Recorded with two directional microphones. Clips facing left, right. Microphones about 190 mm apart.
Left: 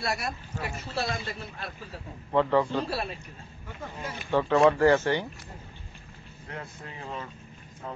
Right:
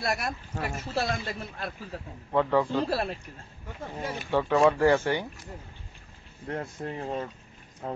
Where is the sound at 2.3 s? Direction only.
10° right (ahead or behind).